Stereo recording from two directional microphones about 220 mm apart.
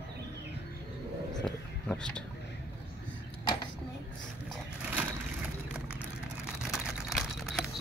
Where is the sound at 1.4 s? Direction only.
5° left (ahead or behind).